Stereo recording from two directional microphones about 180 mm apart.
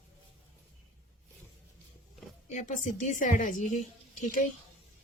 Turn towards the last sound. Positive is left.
turn(degrees=45)  # may be behind; listen again after turning